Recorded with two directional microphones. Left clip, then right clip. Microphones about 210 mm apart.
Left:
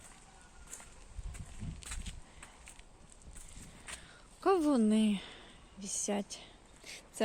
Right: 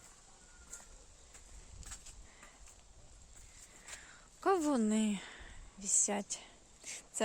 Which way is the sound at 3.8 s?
Centre (ahead or behind).